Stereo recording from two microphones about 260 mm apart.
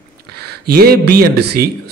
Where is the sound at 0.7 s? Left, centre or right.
Right.